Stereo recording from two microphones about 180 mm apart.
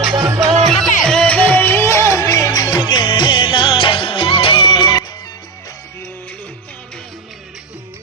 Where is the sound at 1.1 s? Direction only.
5° left (ahead or behind).